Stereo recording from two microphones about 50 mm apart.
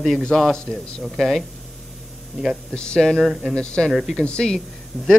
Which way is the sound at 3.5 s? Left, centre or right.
Centre.